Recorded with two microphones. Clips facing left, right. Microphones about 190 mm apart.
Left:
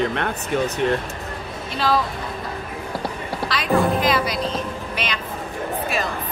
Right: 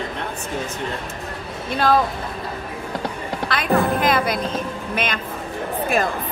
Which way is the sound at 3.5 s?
50° right (ahead or behind).